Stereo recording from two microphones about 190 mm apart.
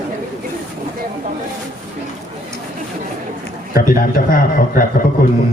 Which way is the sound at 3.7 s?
50° left (ahead or behind).